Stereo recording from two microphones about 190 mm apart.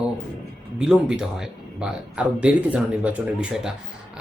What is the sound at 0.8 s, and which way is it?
Speech, 5° right (ahead or behind).